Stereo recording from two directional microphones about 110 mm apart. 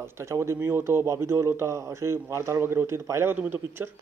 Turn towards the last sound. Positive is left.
turn(degrees=-20)  # may be behind; listen again after turning